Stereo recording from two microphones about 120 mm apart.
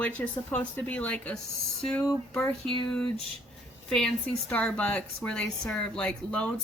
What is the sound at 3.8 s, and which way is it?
A woman's voice, 5° left (ahead or behind).